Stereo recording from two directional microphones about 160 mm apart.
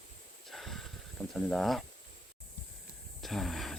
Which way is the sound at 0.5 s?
Centre (ahead or behind).